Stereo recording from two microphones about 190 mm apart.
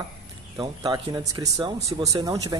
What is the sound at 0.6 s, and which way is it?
Speech, 20° right (ahead or behind).